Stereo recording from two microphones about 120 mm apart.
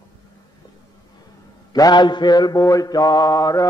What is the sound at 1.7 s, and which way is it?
Mantra, 35° left (ahead or behind).